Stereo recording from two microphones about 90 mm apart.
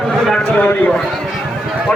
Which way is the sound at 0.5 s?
15° left (ahead or behind).